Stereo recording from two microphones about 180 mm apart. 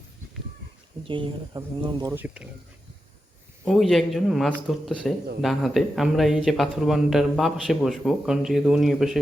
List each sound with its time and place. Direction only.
1.0 s speech: 30° right (ahead or behind)
2.1 s speech: 10° right (ahead or behind)
3.7 s speech: centre (ahead or behind)